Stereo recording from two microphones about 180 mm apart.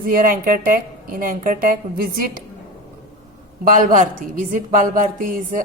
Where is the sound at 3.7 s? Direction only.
45° right (ahead or behind).